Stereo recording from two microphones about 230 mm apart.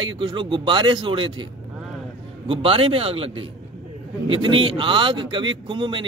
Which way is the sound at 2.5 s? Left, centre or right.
Right.